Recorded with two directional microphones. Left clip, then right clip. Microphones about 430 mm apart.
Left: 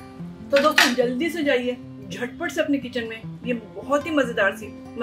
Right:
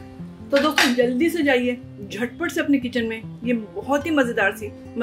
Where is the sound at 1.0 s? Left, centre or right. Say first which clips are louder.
Right 3 dB; centre.